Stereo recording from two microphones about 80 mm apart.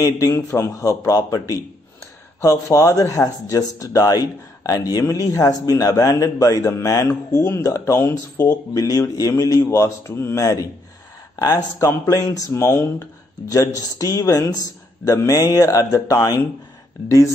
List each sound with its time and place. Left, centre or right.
0.0 s speech: left